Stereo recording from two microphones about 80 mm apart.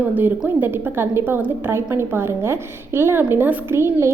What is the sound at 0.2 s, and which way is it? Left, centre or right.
A woman's voice, right.